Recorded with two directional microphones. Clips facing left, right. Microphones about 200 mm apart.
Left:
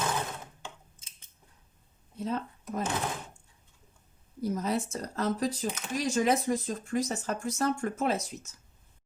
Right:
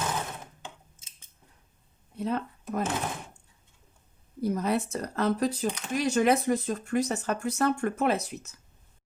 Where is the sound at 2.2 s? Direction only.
60° right (ahead or behind).